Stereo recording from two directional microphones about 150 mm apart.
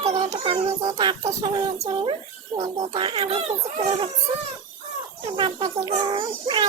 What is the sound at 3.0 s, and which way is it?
A child's voice, 35° right (ahead or behind).